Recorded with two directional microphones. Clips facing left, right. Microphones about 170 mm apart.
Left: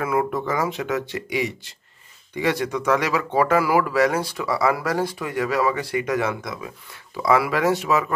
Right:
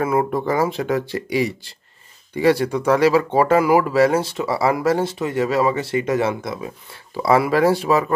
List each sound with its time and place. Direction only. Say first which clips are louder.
0.0 s speech: right 3 dB; 30° right (ahead or behind)